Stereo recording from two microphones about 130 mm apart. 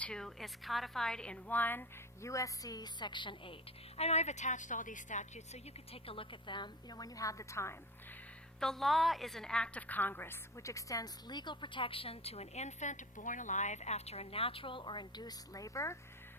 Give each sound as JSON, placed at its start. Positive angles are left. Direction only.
{"t": 0.0, "sound": "a woman's voice", "side_deg": 5}
{"t": 2.2, "sound": "a woman's voice", "side_deg": 25}
{"t": 3.9, "sound": "a woman's voice", "side_deg": 55}
{"t": 5.9, "sound": "a woman's voice", "side_deg": 45}
{"t": 8.6, "sound": "a woman's voice", "side_deg": 0}